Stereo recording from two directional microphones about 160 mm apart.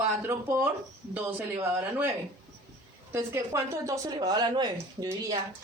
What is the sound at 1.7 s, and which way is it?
Speech, 10° right (ahead or behind).